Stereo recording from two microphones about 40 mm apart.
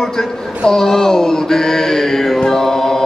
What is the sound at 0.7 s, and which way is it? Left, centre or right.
Mantra, centre.